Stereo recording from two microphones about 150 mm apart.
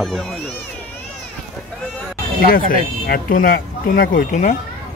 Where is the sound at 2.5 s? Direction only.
75° left (ahead or behind); by 4.5 s 55° left (ahead or behind).